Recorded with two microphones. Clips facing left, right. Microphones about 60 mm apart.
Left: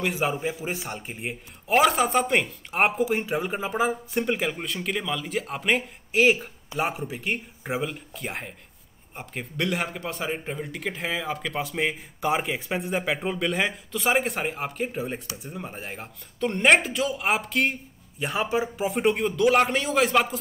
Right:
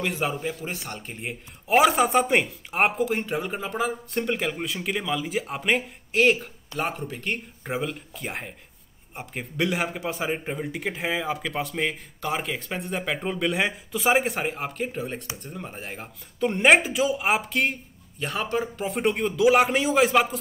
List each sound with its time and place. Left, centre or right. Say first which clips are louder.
0.0 s a man's voice: left 1 dB; centre
1.7 s a man's voice: right 1 dB; centre
18.2 s a man's voice: left 1 dB; centre